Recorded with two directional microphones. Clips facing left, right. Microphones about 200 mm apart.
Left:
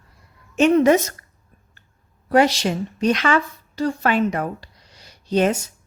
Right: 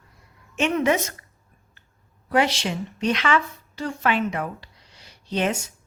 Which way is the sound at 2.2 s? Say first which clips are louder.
Left 5 dB; 40° left (ahead or behind).